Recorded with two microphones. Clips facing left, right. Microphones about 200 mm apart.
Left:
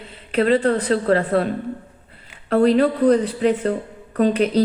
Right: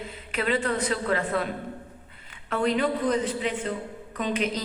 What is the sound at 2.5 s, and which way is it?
Speech, 35° left (ahead or behind).